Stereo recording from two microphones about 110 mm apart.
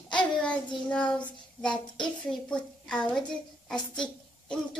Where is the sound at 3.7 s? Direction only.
5° left (ahead or behind).